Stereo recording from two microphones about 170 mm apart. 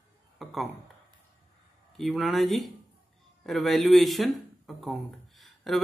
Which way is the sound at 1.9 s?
Centre (ahead or behind).